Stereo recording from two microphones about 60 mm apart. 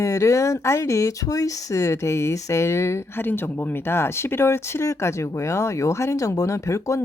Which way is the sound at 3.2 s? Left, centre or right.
Left.